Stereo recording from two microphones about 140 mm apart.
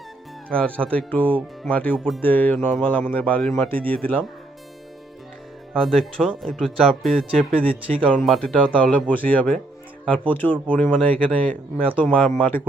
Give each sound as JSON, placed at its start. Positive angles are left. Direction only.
{"t": 0.5, "sound": "speech", "side_deg": 10}
{"t": 5.7, "sound": "speech", "side_deg": 0}
{"t": 7.5, "sound": "speech", "side_deg": -40}
{"t": 8.1, "sound": "speech", "side_deg": 5}